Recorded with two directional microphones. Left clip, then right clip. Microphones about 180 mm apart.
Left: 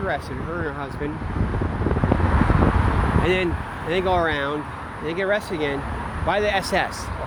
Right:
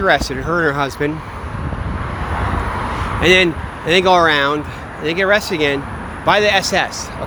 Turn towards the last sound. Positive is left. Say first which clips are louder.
# right 7 dB
turn(degrees=-10)  # may be behind; listen again after turning